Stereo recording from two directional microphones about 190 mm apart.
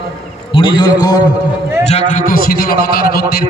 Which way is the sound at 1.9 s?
40° left (ahead or behind).